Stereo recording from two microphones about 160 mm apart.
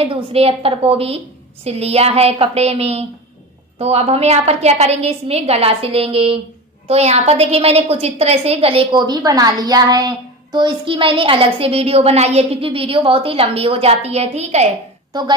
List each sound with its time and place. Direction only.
0.0 s a woman's voice: 35° right (ahead or behind)
15.1 s a woman's voice: 25° right (ahead or behind)